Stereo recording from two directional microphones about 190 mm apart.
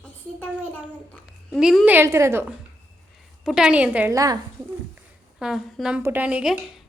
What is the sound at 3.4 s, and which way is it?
Speech, centre (ahead or behind).